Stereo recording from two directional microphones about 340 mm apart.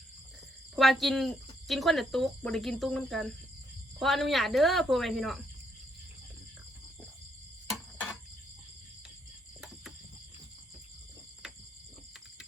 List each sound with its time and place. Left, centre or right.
0.8 s speech: centre